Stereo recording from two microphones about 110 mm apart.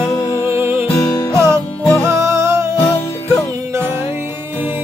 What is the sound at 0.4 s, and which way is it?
Music, 25° right (ahead or behind).